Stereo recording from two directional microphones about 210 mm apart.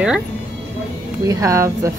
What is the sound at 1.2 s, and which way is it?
Speech, 15° right (ahead or behind).